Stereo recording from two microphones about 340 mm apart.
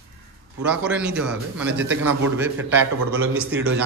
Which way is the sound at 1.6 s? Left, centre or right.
Right.